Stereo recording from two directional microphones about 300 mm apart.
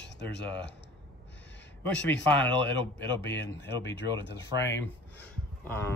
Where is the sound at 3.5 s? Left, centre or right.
Left.